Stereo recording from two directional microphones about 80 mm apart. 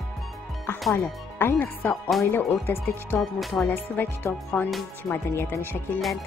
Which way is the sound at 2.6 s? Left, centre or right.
Left.